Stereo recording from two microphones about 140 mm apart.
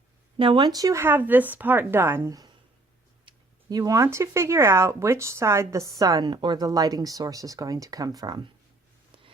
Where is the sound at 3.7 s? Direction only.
25° right (ahead or behind).